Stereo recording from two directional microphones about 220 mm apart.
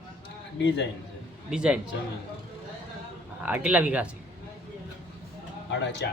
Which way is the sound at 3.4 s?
5° right (ahead or behind).